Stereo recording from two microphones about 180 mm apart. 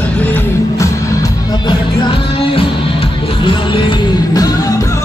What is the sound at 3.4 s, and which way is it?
Music, 30° left (ahead or behind).